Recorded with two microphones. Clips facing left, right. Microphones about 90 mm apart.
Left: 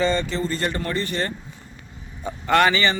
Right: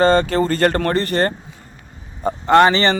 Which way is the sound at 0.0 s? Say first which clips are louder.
Right 8 dB; 65° right (ahead or behind).